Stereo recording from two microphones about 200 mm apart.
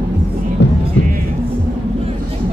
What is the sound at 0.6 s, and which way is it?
Music, 65° left (ahead or behind).